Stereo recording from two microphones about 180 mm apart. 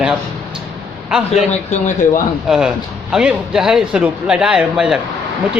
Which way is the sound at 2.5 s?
5° right (ahead or behind).